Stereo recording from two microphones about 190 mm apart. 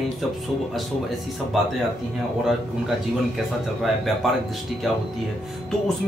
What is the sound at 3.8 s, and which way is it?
Speech, centre (ahead or behind).